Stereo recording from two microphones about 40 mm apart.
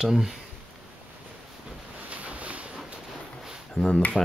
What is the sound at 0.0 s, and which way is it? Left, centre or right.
Speech, centre.